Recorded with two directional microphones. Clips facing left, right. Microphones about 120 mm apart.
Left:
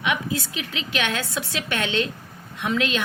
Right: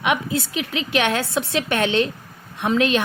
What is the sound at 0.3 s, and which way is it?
A woman's voice, 25° right (ahead or behind).